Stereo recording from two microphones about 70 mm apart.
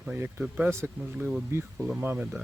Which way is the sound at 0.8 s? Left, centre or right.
Centre.